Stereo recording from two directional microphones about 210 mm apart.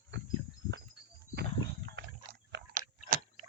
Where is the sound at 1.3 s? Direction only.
55° right (ahead or behind).